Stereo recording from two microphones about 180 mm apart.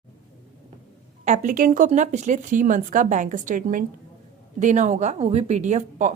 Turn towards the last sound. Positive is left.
turn(degrees=-40)  # may be behind; listen again after turning